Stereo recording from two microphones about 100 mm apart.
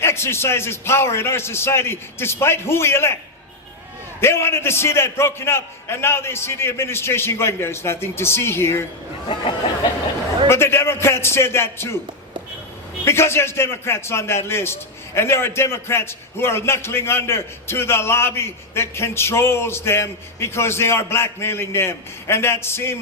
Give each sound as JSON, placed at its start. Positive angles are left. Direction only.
{"t": 0.0, "sound": "a man's voice", "side_deg": 25}
{"t": 4.2, "sound": "a man's voice", "side_deg": 25}
{"t": 9.3, "sound": "a sound", "side_deg": 55}
{"t": 10.5, "sound": "a man's voice", "side_deg": 25}
{"t": 13.1, "sound": "a man's voice", "side_deg": 25}